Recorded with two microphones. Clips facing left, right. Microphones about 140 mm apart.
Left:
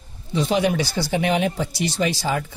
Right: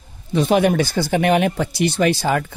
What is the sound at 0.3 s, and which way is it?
Speech, 55° right (ahead or behind).